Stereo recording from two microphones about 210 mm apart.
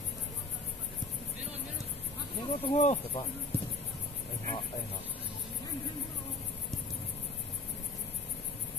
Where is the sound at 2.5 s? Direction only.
30° left (ahead or behind).